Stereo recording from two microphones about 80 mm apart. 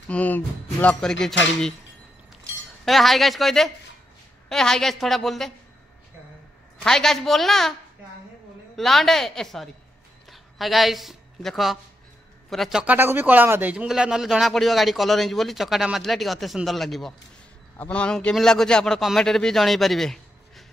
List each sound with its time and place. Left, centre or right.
0.1 s speech: left
2.8 s a man's voice: centre
6.8 s a man's voice: centre
8.7 s a man's voice: centre
12.8 s speech: right
13.8 s a man's voice: centre
17.7 s a man's voice: centre